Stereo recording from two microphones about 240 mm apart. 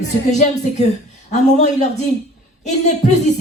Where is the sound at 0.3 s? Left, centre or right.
Left.